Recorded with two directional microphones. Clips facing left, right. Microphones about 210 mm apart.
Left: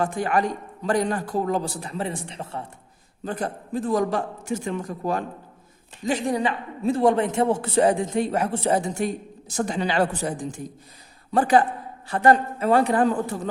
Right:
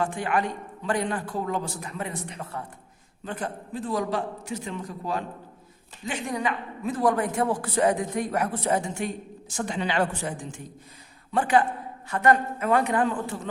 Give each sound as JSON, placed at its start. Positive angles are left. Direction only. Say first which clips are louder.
{"t": 0.0, "sound": "a man's voice", "louder": "left 3 dB", "side_deg": 40}
{"t": 3.2, "sound": "a man's voice", "louder": "left 4 dB", "side_deg": 40}
{"t": 6.1, "sound": "a man's voice", "louder": "left 5 dB", "side_deg": 35}